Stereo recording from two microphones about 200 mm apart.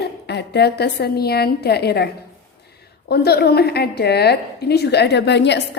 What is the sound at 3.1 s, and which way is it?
A woman's voice, 55° left (ahead or behind).